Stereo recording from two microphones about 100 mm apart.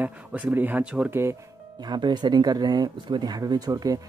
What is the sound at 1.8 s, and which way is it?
Speech, 45° right (ahead or behind).